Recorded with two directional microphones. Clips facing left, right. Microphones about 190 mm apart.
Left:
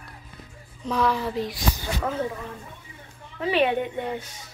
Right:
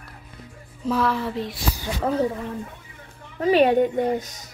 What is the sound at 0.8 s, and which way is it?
Speech, 5° right (ahead or behind).